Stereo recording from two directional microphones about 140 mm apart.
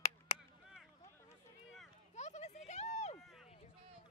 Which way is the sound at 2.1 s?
55° left (ahead or behind).